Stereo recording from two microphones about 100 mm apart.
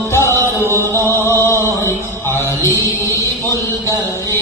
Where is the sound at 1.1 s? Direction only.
25° left (ahead or behind).